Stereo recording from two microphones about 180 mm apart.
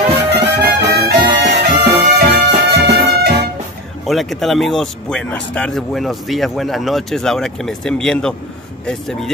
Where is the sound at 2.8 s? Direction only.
65° right (ahead or behind).